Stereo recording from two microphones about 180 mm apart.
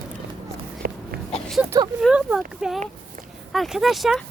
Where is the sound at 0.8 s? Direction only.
60° right (ahead or behind).